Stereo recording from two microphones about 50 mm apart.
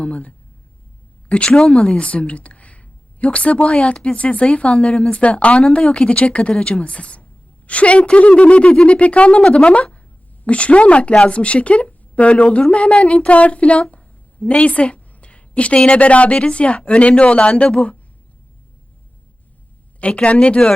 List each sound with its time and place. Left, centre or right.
0.0 s speech: left
1.5 s speech: centre
2.0 s a woman's voice: left
11.1 s speech: centre
11.3 s speech: left
13.9 s a sound: left
16.0 s speech: left
20.0 s speech: left